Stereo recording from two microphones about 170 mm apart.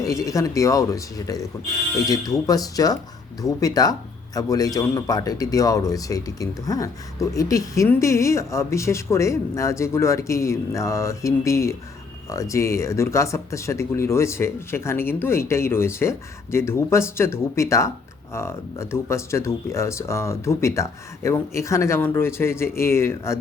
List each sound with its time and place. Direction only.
0.0 s a man's voice: 20° left (ahead or behind)